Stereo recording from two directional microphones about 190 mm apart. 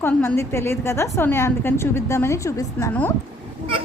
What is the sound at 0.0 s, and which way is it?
A woman's voice, 10° left (ahead or behind).